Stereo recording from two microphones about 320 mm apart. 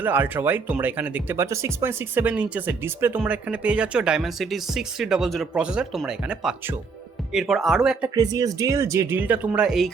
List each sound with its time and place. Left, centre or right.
0.0 s speech: centre